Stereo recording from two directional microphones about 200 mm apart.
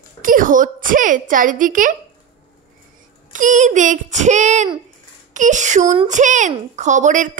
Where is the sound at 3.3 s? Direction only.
40° right (ahead or behind).